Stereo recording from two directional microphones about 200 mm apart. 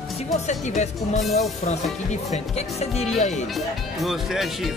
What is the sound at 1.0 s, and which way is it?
Speech, centre (ahead or behind).